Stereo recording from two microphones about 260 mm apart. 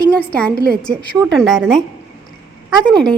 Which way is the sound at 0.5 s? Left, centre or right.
Right.